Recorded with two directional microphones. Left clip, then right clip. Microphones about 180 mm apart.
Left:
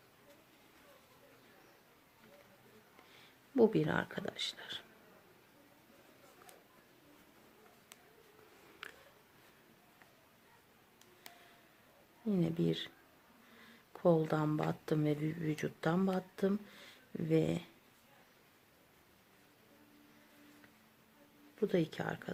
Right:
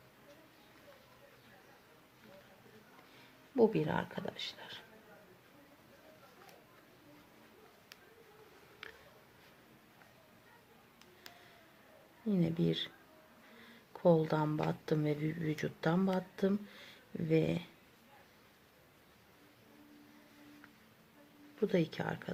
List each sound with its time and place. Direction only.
3.5 s speech: 25° left (ahead or behind)
8.8 s a sound: 30° left (ahead or behind)
12.2 s speech: 15° left (ahead or behind)
13.9 s speech: 15° left (ahead or behind)
21.6 s speech: 15° left (ahead or behind)